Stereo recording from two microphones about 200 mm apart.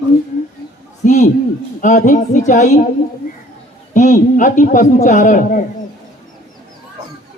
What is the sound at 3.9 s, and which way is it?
A man's voice, 40° left (ahead or behind).